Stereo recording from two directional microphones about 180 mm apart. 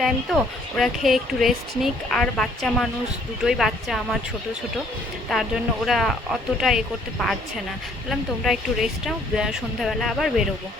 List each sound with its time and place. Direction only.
0.0 s speech: centre (ahead or behind)
5.3 s speech: centre (ahead or behind)
8.4 s speech: centre (ahead or behind)